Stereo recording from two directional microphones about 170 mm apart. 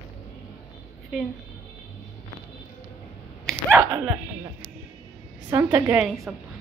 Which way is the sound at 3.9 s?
20° right (ahead or behind).